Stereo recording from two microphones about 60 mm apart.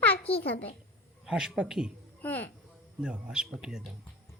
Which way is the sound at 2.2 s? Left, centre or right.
Left.